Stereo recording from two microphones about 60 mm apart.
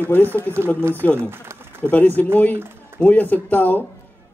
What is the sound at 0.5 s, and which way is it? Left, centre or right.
Speech, right.